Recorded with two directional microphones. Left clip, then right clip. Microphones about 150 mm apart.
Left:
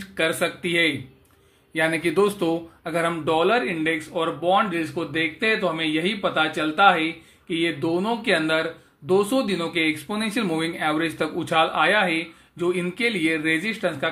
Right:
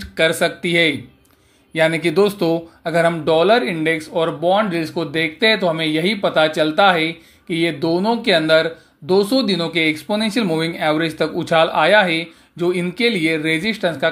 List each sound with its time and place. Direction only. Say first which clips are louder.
0.0 s speech: right 6 dB; 25° right (ahead or behind)